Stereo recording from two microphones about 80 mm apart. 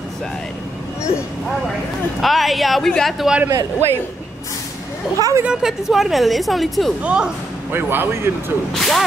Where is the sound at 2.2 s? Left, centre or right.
Centre.